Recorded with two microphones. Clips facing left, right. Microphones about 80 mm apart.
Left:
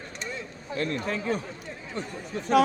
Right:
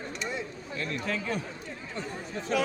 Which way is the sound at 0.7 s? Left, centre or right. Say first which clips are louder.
Left 6 dB; left.